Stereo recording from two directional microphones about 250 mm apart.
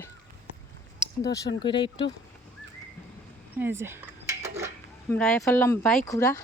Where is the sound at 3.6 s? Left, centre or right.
Centre.